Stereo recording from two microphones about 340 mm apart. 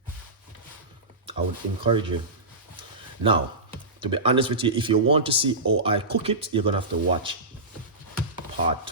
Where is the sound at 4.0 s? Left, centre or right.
Centre.